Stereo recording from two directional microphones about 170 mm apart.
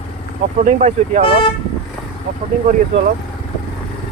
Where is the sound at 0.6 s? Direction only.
45° right (ahead or behind).